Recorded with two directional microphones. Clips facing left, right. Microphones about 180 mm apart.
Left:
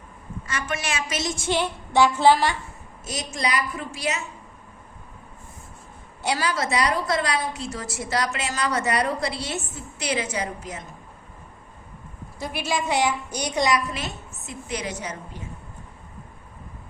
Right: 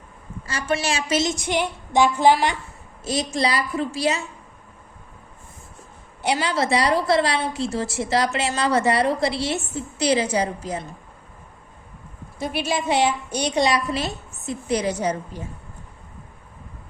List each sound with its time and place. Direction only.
0.4 s a woman's voice: 30° right (ahead or behind)
3.0 s a woman's voice: 30° right (ahead or behind)
6.2 s a woman's voice: 25° right (ahead or behind)
12.4 s a woman's voice: 20° right (ahead or behind)